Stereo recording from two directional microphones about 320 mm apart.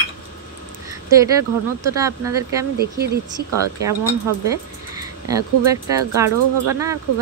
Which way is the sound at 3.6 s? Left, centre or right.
Centre.